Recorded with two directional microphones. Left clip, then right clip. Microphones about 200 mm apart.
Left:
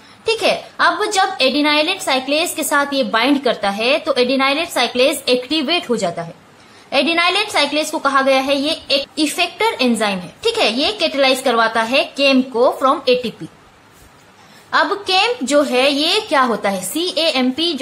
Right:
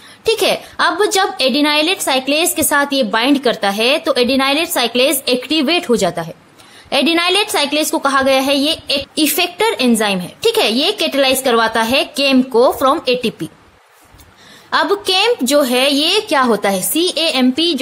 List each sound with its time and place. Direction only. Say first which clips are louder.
0.2 s a woman's voice: right 2 dB; 45° right (ahead or behind)
14.7 s a woman's voice: right 1 dB; 45° right (ahead or behind)